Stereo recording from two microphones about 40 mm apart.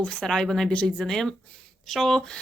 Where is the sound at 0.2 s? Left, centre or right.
Centre.